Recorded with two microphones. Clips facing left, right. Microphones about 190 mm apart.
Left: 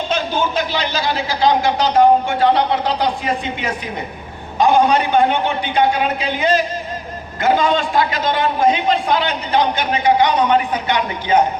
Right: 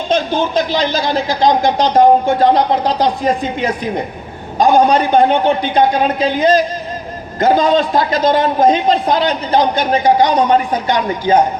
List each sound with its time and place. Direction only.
0.5 s a man's voice: 40° right (ahead or behind)